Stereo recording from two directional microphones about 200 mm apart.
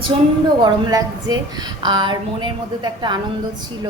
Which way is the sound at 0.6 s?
20° right (ahead or behind).